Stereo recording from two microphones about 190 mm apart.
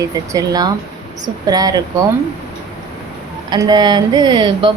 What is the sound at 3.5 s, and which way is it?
Speech, 20° right (ahead or behind).